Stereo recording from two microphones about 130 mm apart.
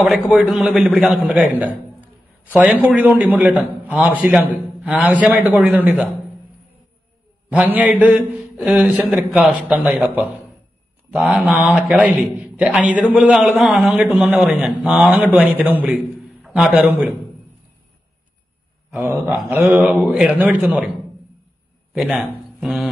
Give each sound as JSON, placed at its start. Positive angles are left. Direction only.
{"t": 0.3, "sound": "a man's voice", "side_deg": -5}
{"t": 7.5, "sound": "a man's voice", "side_deg": -10}
{"t": 18.9, "sound": "a man's voice", "side_deg": -15}
{"t": 21.9, "sound": "a man's voice", "side_deg": 0}
{"t": 22.6, "sound": "a sound", "side_deg": -5}